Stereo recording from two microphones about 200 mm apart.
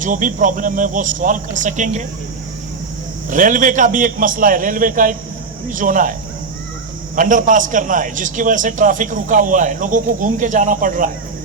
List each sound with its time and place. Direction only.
0.0 s a man's voice: 40° right (ahead or behind)
3.2 s a man's voice: 40° right (ahead or behind)
7.2 s a man's voice: 40° right (ahead or behind)